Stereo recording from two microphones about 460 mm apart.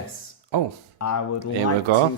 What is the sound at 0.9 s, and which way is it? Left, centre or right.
Speech, left.